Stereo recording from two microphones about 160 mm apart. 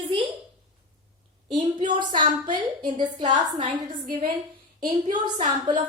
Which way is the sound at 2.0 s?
30° right (ahead or behind).